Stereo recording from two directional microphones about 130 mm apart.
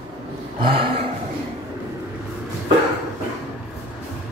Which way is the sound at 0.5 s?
45° right (ahead or behind).